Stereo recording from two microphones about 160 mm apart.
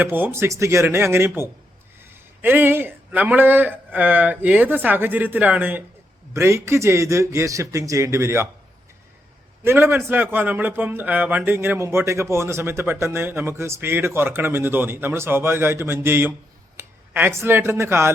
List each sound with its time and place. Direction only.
0.0 s speech: 10° right (ahead or behind)
9.6 s speech: 15° right (ahead or behind)